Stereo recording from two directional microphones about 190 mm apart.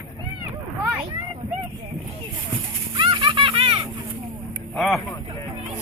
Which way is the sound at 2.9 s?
25° right (ahead or behind).